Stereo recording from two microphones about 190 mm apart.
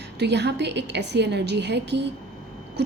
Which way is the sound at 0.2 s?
65° right (ahead or behind).